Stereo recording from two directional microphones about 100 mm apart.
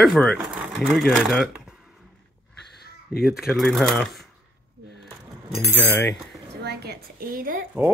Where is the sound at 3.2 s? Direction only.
5° right (ahead or behind).